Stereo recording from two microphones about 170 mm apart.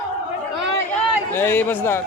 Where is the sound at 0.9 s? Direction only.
15° left (ahead or behind).